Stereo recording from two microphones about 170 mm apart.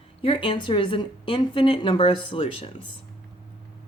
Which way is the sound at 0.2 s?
30° left (ahead or behind).